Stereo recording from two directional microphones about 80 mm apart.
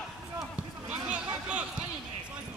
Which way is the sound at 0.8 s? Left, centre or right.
Centre.